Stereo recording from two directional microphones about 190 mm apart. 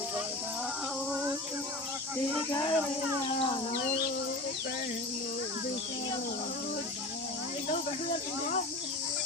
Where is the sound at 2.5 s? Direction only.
20° left (ahead or behind).